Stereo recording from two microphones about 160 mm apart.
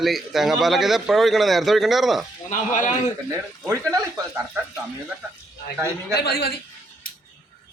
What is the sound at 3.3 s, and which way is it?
Speech, 20° right (ahead or behind).